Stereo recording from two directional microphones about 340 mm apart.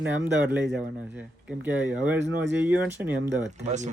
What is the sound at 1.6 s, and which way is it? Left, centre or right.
Speech, centre.